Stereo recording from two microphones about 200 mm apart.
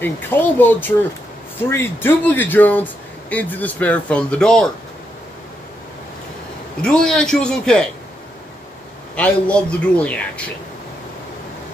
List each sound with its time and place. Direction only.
0.0 s a man's voice: 10° left (ahead or behind)
6.8 s a man's voice: 5° left (ahead or behind)
9.1 s a man's voice: 5° left (ahead or behind)